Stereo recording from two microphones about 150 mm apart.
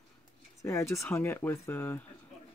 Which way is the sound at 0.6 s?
20° left (ahead or behind).